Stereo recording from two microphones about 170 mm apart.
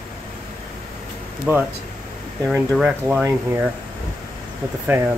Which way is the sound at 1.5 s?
10° right (ahead or behind).